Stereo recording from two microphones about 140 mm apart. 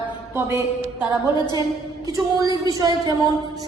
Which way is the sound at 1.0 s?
30° left (ahead or behind).